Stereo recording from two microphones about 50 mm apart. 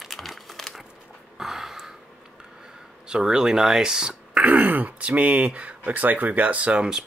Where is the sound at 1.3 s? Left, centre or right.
Centre.